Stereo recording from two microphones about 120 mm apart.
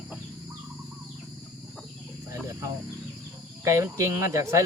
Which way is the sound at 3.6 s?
25° right (ahead or behind).